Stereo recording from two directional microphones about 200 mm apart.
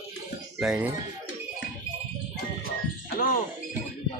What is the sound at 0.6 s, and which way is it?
Speech, 5° right (ahead or behind).